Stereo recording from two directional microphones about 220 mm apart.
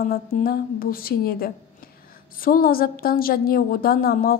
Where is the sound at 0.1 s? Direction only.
40° left (ahead or behind).